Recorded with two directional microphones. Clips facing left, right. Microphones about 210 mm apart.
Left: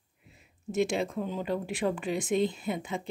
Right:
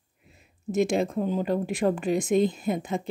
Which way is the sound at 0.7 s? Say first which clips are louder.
Right 4 dB; 45° right (ahead or behind).